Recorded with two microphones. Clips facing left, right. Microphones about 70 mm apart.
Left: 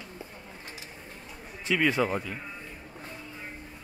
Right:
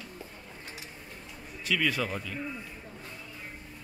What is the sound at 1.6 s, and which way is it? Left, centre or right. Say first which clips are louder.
Speech: left 4 dB; left.